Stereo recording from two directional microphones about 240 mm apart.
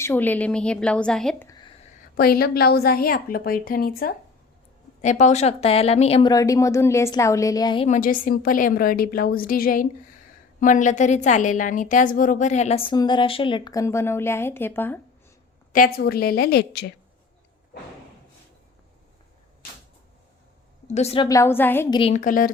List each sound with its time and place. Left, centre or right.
0.0 s a woman's voice: centre
2.1 s a woman's voice: left; by 7.9 s centre
7.9 s a woman's voice: left; by 15.0 s centre
15.7 s a woman's voice: left
20.8 s a woman's voice: left
21.2 s a woman's voice: centre
21.9 s a woman's voice: left